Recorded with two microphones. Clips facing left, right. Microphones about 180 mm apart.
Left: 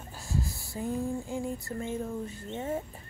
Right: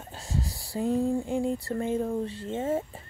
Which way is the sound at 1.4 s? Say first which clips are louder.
Right 6 dB; 30° right (ahead or behind).